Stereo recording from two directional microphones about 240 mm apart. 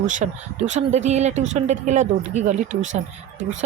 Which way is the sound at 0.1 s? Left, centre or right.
Right.